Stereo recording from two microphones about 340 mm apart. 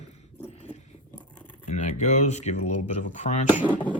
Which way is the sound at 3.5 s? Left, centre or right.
Centre.